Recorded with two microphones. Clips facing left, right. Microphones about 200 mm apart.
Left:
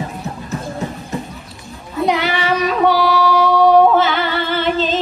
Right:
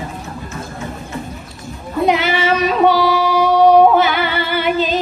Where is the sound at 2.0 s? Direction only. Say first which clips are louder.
Right 2 dB; 20° right (ahead or behind).